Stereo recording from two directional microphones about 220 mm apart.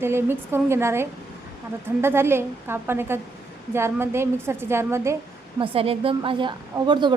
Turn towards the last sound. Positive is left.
turn(degrees=-20)  # may be behind; listen again after turning